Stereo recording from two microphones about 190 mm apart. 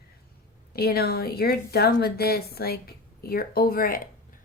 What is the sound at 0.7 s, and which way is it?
A woman's voice, 55° left (ahead or behind).